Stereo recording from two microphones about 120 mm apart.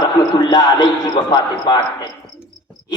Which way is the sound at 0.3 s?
35° left (ahead or behind).